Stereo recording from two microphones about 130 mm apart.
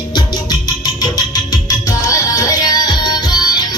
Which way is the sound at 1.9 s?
25° left (ahead or behind).